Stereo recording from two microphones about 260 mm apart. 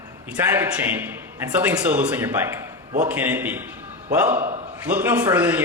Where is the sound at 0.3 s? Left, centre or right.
Centre.